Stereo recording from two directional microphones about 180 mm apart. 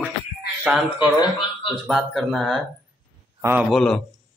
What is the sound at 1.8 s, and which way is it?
Speech, centre (ahead or behind).